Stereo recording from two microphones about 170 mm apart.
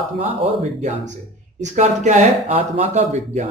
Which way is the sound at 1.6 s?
45° right (ahead or behind).